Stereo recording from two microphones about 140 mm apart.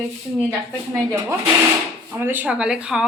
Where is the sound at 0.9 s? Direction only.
15° right (ahead or behind).